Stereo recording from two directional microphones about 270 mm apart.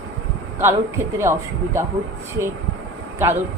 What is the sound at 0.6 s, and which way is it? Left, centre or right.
A man's voice, centre.